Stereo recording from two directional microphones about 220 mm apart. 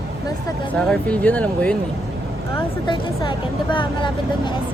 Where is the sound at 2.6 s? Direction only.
20° left (ahead or behind).